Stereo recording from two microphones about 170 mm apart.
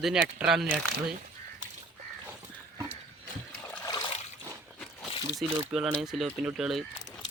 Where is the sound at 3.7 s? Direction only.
15° left (ahead or behind).